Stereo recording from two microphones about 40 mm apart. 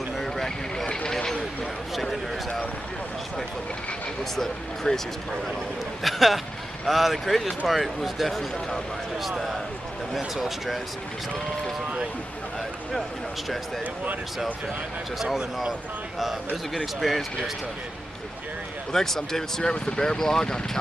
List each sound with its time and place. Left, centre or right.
0.2 s vehicle: centre
1.1 s a sound: centre
2.0 s speech: centre
4.4 s speech: centre
6.0 s speech: centre
15.1 s speech: centre
17.0 s speech: centre
18.9 s speech: centre